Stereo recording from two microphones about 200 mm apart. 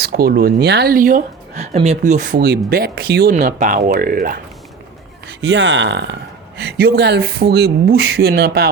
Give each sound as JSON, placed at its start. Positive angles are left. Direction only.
{"t": 0.0, "sound": "speech", "side_deg": -50}
{"t": 3.3, "sound": "speech", "side_deg": -40}
{"t": 5.4, "sound": "speech", "side_deg": -60}